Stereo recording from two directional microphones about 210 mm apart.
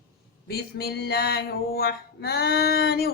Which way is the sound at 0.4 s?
50° left (ahead or behind).